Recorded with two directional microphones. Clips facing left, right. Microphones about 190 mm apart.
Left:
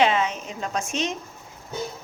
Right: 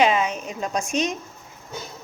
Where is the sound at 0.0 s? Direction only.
15° right (ahead or behind).